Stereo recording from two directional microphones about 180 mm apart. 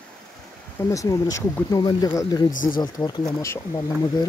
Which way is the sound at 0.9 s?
20° left (ahead or behind).